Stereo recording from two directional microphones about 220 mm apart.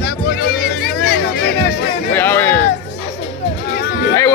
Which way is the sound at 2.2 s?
10° left (ahead or behind).